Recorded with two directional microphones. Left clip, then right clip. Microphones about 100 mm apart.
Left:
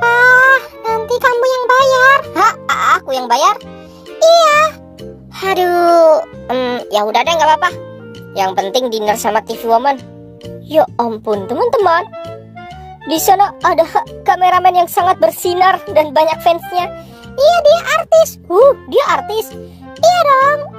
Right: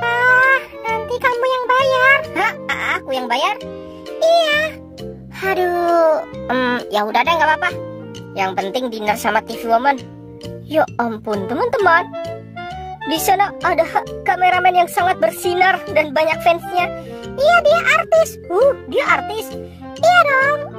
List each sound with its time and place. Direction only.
0.0 s music: 10° left (ahead or behind)
5.4 s a child's voice: 15° left (ahead or behind)
5.9 s music: 5° left (ahead or behind)
6.8 s a child's voice: centre (ahead or behind); by 19.4 s 15° left (ahead or behind)
20.0 s music: 10° left (ahead or behind)